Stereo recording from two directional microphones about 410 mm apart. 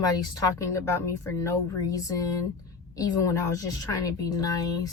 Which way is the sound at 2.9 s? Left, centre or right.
Centre.